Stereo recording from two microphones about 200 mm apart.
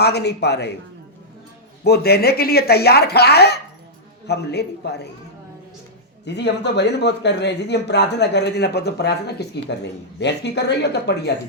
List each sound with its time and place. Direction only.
0.0 s speech: 55° left (ahead or behind)
1.8 s speech: 55° left (ahead or behind)
6.2 s speech: 60° left (ahead or behind)